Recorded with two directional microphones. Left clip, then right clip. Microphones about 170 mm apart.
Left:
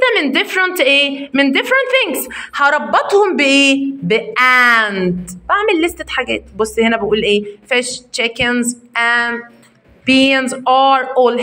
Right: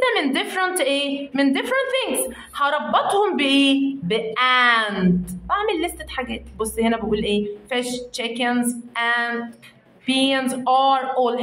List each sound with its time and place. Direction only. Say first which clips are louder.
0.0 s a woman's voice: left 7 dB; 30° left (ahead or behind)